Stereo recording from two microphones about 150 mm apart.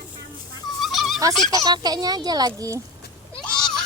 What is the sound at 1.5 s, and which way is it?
Speech, 25° right (ahead or behind).